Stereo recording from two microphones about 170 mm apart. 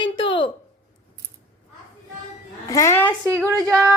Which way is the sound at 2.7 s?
15° left (ahead or behind).